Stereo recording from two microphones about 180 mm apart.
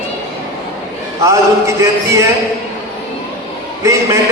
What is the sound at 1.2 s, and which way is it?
Speech, 15° right (ahead or behind).